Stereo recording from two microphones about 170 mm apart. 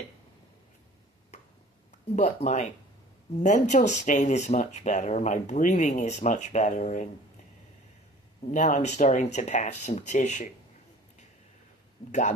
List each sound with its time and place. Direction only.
2.1 s speech: 45° left (ahead or behind)
8.5 s speech: 45° left (ahead or behind)